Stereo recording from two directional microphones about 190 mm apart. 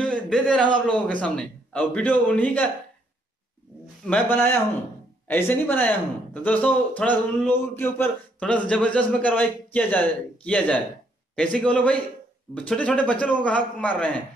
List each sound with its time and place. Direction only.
0.0 s a sound: 5° left (ahead or behind)
0.8 s speech: 5° left (ahead or behind)
4.0 s speech: 10° left (ahead or behind)